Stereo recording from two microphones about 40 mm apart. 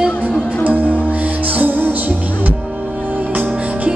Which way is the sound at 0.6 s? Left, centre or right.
Right.